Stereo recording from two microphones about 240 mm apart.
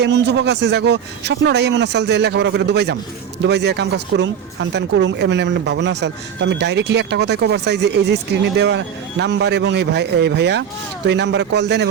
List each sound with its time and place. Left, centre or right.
0.0 s speech: right